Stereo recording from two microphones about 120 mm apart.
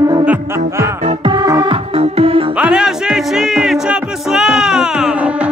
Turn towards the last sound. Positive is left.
turn(degrees=-10)  # may be behind; listen again after turning